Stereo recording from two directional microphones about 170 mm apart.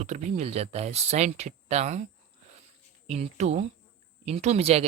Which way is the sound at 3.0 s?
40° right (ahead or behind).